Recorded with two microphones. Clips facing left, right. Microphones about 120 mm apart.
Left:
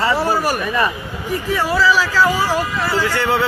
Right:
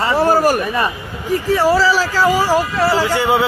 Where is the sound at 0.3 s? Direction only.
45° right (ahead or behind).